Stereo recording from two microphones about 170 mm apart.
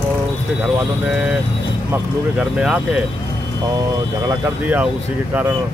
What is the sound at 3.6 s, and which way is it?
Speech, 20° right (ahead or behind).